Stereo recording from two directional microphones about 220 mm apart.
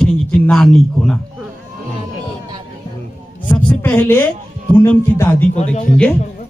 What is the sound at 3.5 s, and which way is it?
A woman's voice, 10° left (ahead or behind).